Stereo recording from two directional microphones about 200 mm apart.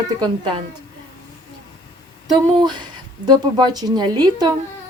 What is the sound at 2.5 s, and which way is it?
A woman's voice, 20° right (ahead or behind).